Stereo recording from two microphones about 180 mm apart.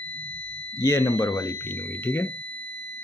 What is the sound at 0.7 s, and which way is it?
Speech, 15° left (ahead or behind).